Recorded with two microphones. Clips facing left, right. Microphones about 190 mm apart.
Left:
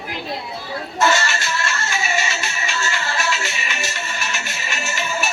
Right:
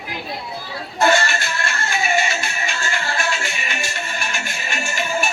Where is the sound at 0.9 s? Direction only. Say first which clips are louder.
Right 2 dB; 55° right (ahead or behind).